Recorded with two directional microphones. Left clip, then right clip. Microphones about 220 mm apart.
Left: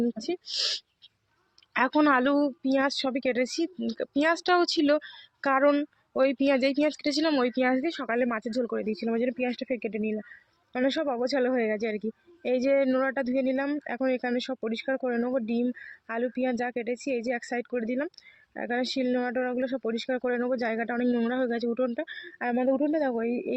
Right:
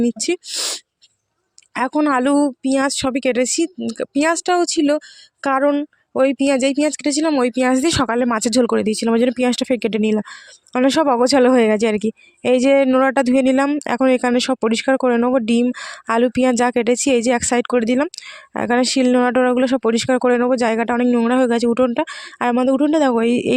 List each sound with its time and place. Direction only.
0.0 s speech: 50° right (ahead or behind)